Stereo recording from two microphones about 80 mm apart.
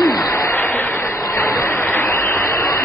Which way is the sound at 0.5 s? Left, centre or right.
Left.